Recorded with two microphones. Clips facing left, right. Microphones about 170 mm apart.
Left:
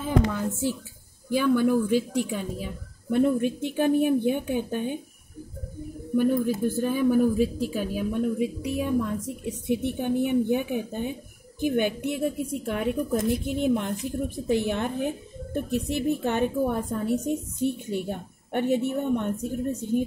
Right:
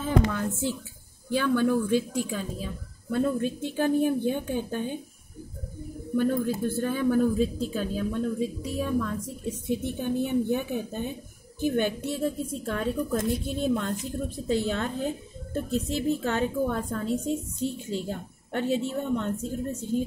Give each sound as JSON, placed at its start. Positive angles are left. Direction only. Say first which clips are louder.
{"t": 0.0, "sound": "a woman's voice", "louder": "left 1 dB", "side_deg": 10}
{"t": 6.1, "sound": "a woman's voice", "louder": "left 2 dB", "side_deg": 15}